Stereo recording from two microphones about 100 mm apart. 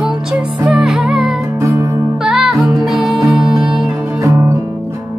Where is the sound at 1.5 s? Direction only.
30° right (ahead or behind).